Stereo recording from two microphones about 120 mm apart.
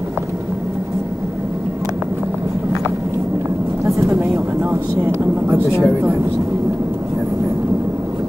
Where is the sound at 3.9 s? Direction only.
25° right (ahead or behind).